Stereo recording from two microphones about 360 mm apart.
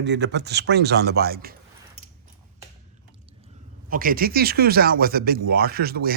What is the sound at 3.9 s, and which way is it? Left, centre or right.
Speech, right.